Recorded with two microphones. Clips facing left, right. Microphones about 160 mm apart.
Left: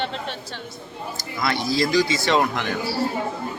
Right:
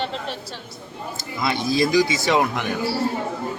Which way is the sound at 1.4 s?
20° right (ahead or behind).